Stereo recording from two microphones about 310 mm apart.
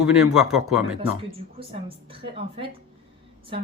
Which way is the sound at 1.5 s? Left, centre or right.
Centre.